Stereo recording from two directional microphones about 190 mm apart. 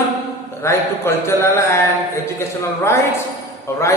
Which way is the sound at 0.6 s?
15° left (ahead or behind).